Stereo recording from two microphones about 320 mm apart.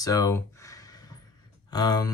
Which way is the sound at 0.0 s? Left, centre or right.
Centre.